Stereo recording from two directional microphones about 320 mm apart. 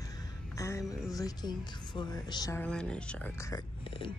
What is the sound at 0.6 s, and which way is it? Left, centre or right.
A woman's voice, centre.